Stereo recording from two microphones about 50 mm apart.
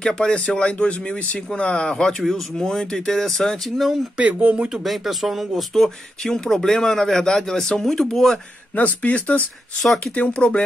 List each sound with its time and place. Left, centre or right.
0.0 s speech: centre
4.2 s speech: right
4.6 s speech: centre
8.7 s speech: left
9.8 s speech: centre
10.1 s speech: left